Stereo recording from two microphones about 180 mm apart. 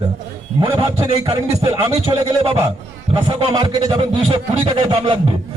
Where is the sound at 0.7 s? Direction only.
15° right (ahead or behind).